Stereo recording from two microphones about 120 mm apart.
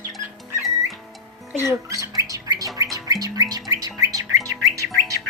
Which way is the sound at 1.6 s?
25° right (ahead or behind).